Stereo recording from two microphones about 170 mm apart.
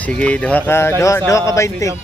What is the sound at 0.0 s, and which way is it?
Speech, 5° left (ahead or behind).